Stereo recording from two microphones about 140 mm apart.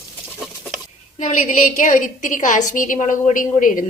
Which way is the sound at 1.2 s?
65° left (ahead or behind).